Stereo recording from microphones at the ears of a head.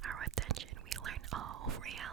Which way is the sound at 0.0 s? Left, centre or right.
Right.